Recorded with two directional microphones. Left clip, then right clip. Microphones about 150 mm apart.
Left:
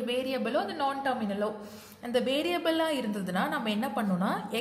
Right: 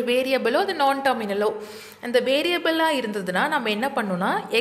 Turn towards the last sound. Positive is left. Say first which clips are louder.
# right 7 dB
turn(degrees=-15)  # may be behind; listen again after turning